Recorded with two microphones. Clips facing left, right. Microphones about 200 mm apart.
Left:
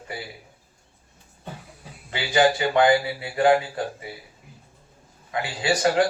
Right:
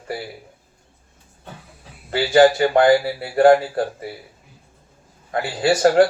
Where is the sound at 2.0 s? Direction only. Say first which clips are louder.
Right 7 dB; 50° right (ahead or behind).